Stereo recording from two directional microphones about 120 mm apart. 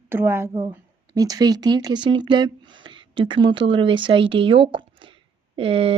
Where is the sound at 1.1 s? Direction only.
30° right (ahead or behind).